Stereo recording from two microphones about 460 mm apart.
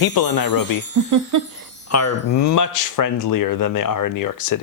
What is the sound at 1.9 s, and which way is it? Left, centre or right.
Speech, left.